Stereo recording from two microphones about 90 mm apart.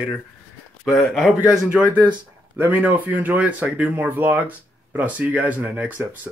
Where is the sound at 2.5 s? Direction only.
20° right (ahead or behind).